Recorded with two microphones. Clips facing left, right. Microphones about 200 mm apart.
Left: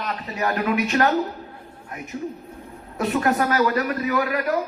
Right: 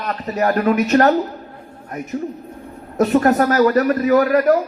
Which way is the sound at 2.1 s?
50° right (ahead or behind).